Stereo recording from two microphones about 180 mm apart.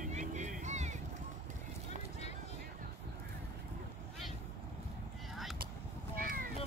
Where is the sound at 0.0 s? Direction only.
45° right (ahead or behind).